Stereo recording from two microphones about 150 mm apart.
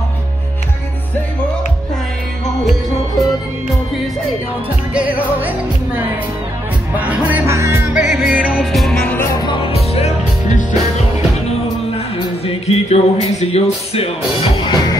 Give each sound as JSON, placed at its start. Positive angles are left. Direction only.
{"t": 4.9, "sound": "music", "side_deg": -10}
{"t": 9.3, "sound": "music", "side_deg": 30}
{"t": 12.2, "sound": "music", "side_deg": 40}
{"t": 14.4, "sound": "music", "side_deg": 30}